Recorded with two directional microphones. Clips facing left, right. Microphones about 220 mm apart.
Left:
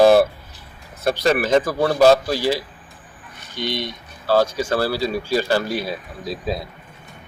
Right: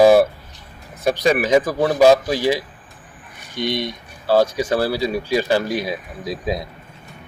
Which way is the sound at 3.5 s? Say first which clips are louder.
Right 3 dB; centre (ahead or behind).